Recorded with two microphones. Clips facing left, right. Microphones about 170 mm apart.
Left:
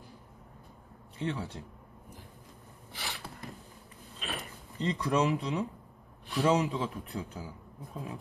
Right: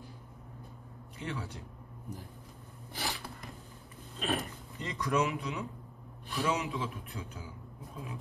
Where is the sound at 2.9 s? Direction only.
40° right (ahead or behind).